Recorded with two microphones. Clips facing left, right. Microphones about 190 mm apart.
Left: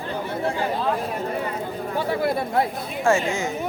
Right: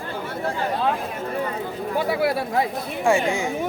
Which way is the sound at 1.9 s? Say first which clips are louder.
Right 1 dB; 10° right (ahead or behind).